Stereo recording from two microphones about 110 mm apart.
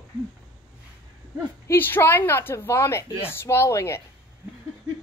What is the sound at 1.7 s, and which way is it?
A woman's voice, 20° left (ahead or behind).